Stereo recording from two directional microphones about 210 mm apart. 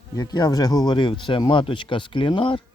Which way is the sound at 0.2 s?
20° left (ahead or behind).